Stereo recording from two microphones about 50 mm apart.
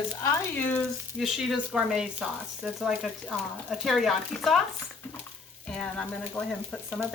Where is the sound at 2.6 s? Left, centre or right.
Centre.